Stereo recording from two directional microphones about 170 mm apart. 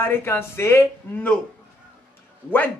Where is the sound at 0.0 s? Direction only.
15° left (ahead or behind).